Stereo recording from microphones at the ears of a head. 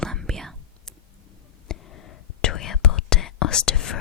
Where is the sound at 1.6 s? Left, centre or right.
Left.